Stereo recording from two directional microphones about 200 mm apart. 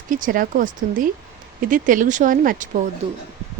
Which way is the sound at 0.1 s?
45° right (ahead or behind).